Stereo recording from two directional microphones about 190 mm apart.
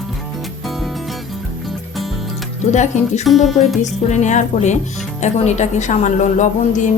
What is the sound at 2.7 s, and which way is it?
Speech, 40° left (ahead or behind).